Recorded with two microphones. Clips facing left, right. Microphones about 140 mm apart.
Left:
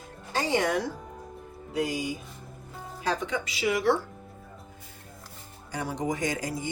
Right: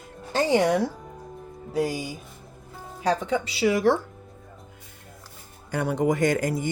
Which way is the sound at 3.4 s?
35° right (ahead or behind).